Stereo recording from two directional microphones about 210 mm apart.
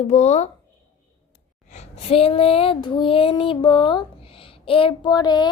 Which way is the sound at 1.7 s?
30° left (ahead or behind).